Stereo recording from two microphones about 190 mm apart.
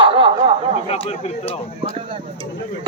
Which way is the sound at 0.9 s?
35° left (ahead or behind).